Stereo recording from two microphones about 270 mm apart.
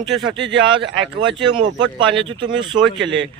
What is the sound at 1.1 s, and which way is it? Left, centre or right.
Speech, centre.